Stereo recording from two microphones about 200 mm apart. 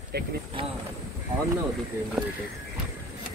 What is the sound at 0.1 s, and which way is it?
Speech, 55° right (ahead or behind).